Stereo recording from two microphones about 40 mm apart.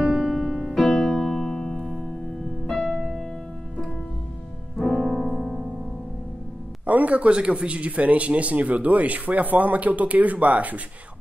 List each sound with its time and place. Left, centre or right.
0.0 s music: centre
4.7 s piano: centre
6.9 s speech: right